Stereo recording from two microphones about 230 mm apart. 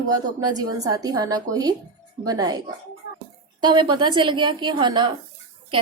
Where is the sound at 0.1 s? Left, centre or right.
Centre.